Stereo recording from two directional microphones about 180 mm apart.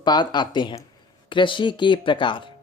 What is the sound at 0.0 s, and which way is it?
Speech, 25° left (ahead or behind).